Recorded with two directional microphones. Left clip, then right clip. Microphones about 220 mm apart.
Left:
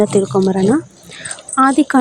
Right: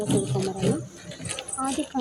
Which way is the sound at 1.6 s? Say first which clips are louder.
Left 18 dB; 40° left (ahead or behind).